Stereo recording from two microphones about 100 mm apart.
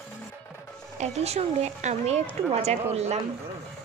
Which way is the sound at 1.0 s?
90° right.